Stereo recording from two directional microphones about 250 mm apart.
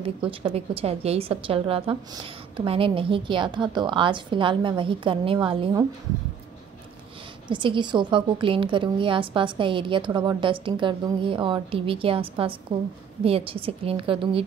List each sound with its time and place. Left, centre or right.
0.0 s a woman's voice: right
7.4 s a woman's voice: centre